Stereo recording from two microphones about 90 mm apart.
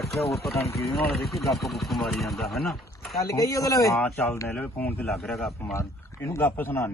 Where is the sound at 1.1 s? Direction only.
Centre (ahead or behind).